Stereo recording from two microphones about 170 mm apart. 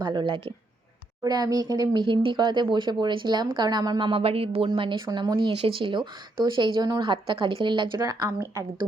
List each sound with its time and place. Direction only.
0.0 s speech: 25° right (ahead or behind)